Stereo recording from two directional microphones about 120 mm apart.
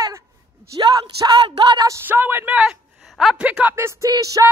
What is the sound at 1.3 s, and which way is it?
Speech, 40° right (ahead or behind).